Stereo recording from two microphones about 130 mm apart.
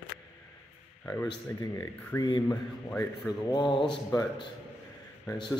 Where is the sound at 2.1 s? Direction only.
20° left (ahead or behind).